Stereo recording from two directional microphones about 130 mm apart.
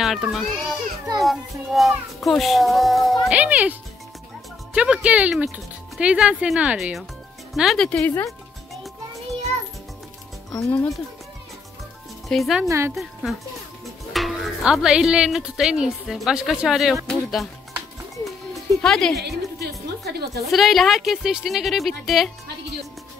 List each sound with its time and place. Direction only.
0.0 s a child's voice: centre (ahead or behind)
3.3 s speech: 10° right (ahead or behind)
4.7 s a woman's voice: 5° right (ahead or behind)
8.0 s speech: 15° left (ahead or behind)
10.6 s speech: 10° left (ahead or behind)
12.3 s a woman's voice: centre (ahead or behind)
12.6 s a woman's voice: 20° right (ahead or behind)
14.1 s a woman's voice: centre (ahead or behind)